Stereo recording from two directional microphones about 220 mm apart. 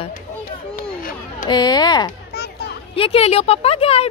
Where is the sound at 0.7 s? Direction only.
35° left (ahead or behind).